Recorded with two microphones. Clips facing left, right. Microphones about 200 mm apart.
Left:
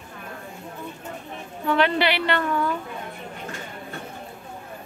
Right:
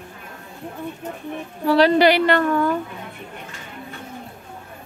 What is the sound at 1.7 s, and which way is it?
A woman's voice, 35° right (ahead or behind).